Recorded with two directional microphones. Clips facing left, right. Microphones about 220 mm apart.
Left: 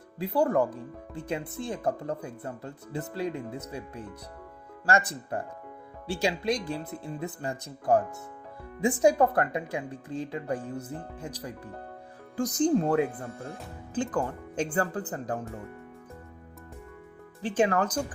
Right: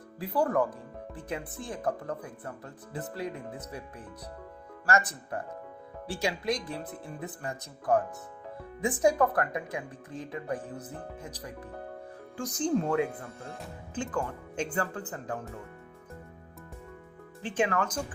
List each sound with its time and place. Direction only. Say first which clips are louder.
0.2 s speech: left 2 dB; 25° left (ahead or behind)
17.4 s speech: left 4 dB; 35° left (ahead or behind)